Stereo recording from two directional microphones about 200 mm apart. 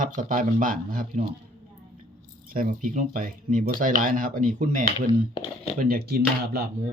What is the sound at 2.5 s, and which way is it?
Speech, 45° right (ahead or behind).